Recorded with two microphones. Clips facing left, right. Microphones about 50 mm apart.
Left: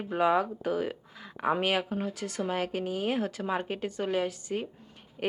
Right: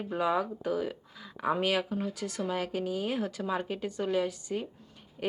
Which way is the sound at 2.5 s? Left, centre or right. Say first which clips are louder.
Left 1 dB; left.